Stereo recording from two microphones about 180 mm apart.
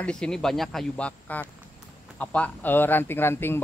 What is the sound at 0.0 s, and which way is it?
Speech, 5° left (ahead or behind).